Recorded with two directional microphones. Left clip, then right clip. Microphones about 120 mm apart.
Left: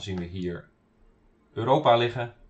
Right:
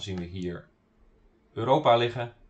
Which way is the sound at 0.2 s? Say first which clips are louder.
Left 2 dB; 5° right (ahead or behind).